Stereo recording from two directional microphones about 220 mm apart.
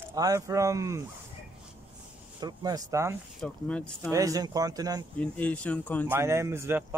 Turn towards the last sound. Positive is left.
turn(degrees=-10)  # may be behind; listen again after turning